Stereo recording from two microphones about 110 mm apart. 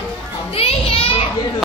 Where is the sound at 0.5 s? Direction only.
60° left (ahead or behind).